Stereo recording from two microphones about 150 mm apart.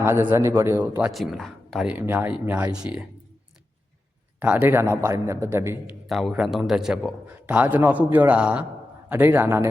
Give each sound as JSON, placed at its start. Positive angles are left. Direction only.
{"t": 0.0, "sound": "a man's voice", "side_deg": -15}
{"t": 1.1, "sound": "a man's voice", "side_deg": 0}
{"t": 4.4, "sound": "a man's voice", "side_deg": -10}
{"t": 6.1, "sound": "a man's voice", "side_deg": 0}